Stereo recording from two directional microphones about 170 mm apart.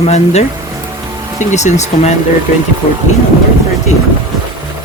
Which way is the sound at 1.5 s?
45° left (ahead or behind).